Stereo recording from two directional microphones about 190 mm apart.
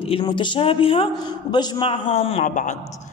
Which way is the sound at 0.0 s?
25° left (ahead or behind).